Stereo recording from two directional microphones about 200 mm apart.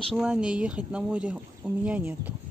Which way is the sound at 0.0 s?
Centre (ahead or behind).